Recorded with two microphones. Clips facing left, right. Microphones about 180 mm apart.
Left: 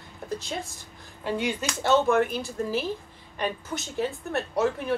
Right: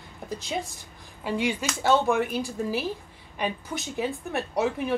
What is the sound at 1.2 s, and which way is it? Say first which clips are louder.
A woman's voice: right 1 dB; 10° right (ahead or behind).